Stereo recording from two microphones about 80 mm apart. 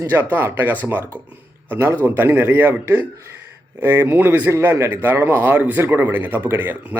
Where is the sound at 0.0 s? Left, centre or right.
Right.